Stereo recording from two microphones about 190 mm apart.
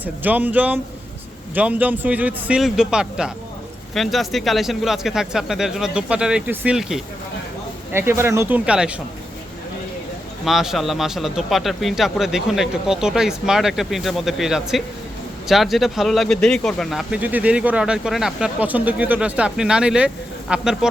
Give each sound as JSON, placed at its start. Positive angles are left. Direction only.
{"t": 0.0, "sound": "a man's voice", "side_deg": -10}
{"t": 10.4, "sound": "speech", "side_deg": 0}